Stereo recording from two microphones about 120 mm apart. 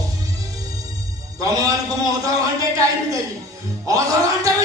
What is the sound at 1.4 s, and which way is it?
Speech, 30° right (ahead or behind).